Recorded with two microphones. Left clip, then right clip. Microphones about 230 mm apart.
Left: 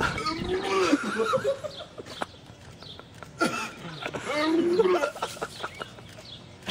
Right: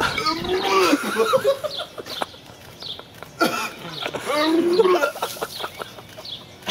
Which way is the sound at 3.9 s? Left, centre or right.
Right.